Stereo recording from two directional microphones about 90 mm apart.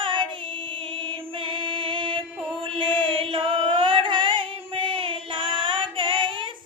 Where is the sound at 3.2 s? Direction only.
80° right.